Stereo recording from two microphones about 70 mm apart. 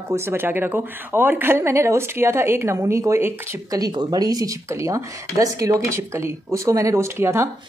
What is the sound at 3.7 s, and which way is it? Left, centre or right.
Speech, right.